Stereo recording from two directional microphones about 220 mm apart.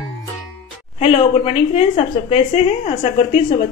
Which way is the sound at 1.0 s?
25° left (ahead or behind).